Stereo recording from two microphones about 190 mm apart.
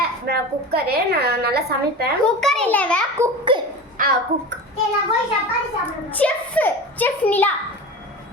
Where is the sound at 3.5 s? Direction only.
25° right (ahead or behind).